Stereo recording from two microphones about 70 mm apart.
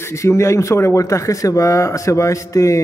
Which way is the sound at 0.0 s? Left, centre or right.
Left.